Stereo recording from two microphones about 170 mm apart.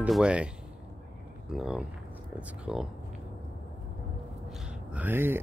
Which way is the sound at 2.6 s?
5° right (ahead or behind).